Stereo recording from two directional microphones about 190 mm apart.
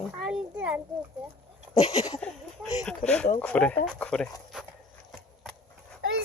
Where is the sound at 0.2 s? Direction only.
5° right (ahead or behind).